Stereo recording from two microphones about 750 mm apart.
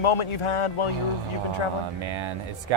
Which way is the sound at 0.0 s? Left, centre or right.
Left.